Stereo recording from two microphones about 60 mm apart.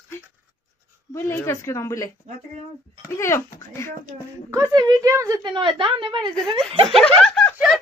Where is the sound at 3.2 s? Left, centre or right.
Left.